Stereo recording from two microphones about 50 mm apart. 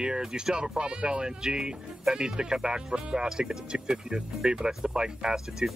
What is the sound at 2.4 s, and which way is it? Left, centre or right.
Speech, centre.